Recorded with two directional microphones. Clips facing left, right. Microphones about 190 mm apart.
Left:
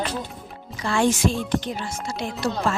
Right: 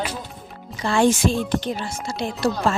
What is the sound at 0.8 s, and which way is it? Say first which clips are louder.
Speech: right 3 dB; 30° right (ahead or behind).